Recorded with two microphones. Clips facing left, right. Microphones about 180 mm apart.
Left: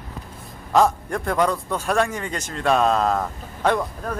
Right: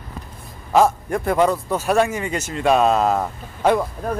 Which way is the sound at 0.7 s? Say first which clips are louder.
Right 2 dB; 5° right (ahead or behind).